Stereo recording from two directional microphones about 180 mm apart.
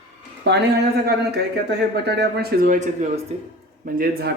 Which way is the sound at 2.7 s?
40° right (ahead or behind).